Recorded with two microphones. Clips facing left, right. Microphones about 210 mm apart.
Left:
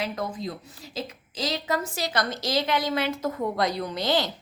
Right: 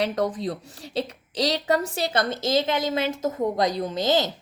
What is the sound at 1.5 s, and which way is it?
Speech, 35° right (ahead or behind).